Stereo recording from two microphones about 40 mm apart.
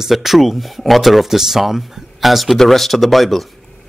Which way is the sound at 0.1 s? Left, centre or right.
Centre.